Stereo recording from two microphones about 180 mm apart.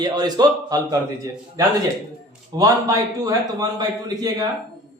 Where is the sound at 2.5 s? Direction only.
20° right (ahead or behind).